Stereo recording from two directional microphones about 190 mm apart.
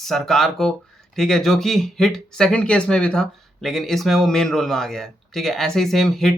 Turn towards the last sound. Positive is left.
turn(degrees=0)  # may be behind; listen again after turning